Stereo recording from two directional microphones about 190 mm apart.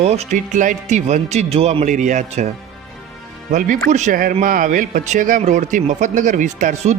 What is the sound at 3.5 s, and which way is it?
Speech, 45° right (ahead or behind).